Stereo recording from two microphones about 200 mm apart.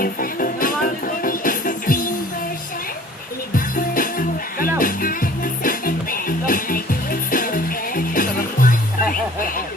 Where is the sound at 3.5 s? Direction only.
45° left (ahead or behind).